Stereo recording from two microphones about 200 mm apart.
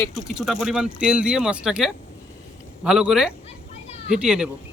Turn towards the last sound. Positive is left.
turn(degrees=-5)  # may be behind; listen again after turning